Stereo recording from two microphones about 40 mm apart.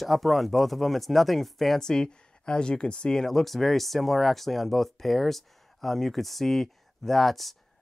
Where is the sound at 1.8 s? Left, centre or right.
Centre.